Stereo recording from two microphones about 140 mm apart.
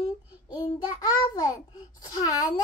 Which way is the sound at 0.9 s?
25° left (ahead or behind).